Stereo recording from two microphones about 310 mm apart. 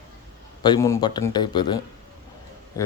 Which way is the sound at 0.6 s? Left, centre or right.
Centre.